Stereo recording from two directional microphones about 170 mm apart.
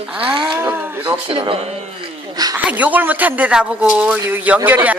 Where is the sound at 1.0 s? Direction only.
30° right (ahead or behind).